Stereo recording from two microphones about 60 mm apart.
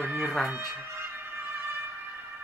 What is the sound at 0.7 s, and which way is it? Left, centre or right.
Music, right.